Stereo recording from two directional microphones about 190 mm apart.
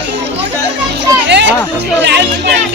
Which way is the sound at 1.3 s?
65° right (ahead or behind).